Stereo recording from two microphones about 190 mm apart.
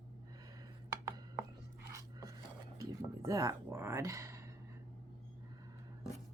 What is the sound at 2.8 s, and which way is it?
Speech, 15° right (ahead or behind).